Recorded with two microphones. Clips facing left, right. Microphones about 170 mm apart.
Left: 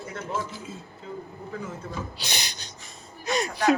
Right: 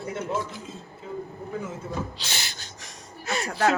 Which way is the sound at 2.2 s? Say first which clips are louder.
Left 1 dB; 15° left (ahead or behind).